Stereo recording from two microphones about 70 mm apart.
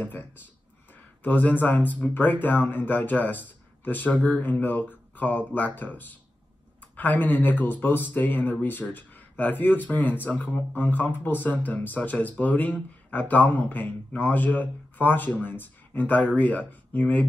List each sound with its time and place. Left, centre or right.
0.0 s speech: left
5.1 s guitar: left
5.8 s speech: left